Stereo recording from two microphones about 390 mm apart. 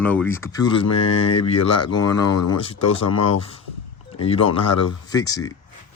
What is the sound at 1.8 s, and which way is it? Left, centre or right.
Speech, centre.